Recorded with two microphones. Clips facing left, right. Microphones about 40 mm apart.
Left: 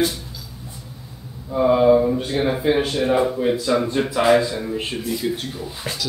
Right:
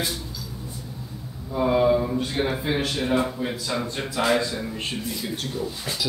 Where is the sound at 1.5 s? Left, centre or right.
Left.